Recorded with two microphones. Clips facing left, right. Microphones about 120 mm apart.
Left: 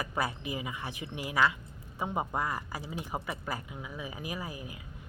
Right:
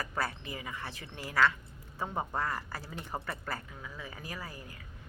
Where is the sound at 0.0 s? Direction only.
15° left (ahead or behind).